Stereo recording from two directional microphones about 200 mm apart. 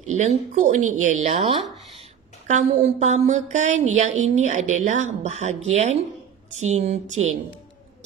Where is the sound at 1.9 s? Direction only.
35° right (ahead or behind).